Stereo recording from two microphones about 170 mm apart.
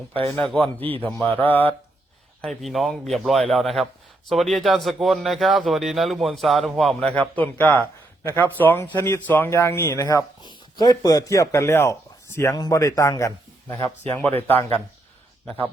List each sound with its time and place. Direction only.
0.4 s a man's voice: 5° left (ahead or behind)